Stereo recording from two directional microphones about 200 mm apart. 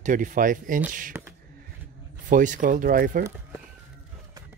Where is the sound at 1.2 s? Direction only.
5° right (ahead or behind).